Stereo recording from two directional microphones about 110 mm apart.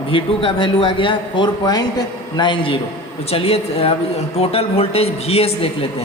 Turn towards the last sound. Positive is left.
turn(degrees=65)  # may be behind; listen again after turning